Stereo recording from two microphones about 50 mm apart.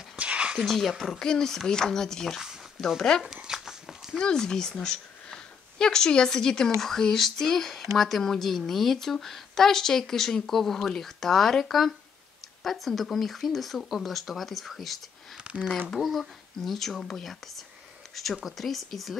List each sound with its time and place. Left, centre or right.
0.1 s a sound: right
0.6 s speech: centre
1.2 s speech: centre
3.4 s a sound: centre
4.2 s speech: centre
13.8 s speech: centre
14.1 s speech: centre
15.4 s speech: right
16.0 s speech: centre